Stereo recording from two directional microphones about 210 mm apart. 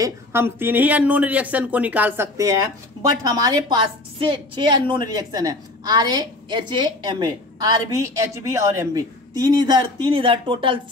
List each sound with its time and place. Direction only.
0.0 s a woman's voice: 10° right (ahead or behind)